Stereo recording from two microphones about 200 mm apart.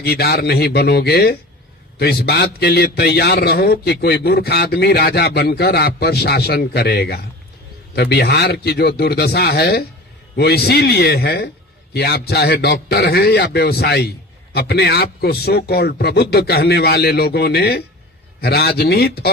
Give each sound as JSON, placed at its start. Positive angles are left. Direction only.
{"t": 0.0, "sound": "a man's voice", "side_deg": 55}